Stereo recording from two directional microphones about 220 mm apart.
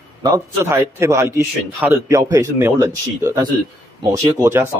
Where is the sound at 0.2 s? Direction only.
15° right (ahead or behind).